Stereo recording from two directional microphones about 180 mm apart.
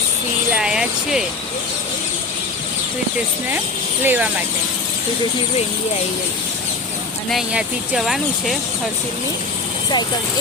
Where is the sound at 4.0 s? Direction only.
10° right (ahead or behind).